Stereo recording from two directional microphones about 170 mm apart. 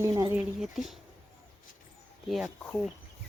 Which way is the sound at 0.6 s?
Centre (ahead or behind).